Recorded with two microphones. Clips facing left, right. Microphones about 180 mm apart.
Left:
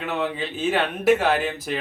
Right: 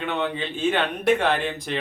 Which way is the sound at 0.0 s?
5° left (ahead or behind).